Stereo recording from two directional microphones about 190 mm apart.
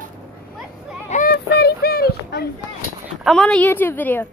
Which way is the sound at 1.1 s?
55° left (ahead or behind).